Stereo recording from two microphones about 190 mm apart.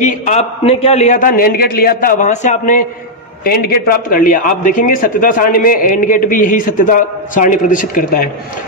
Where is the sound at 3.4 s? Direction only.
55° left (ahead or behind).